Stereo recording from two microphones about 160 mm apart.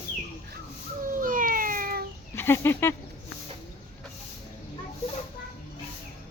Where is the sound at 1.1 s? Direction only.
60° right (ahead or behind).